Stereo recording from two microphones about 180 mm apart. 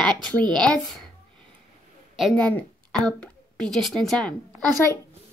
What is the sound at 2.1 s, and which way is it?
A woman's voice, centre (ahead or behind).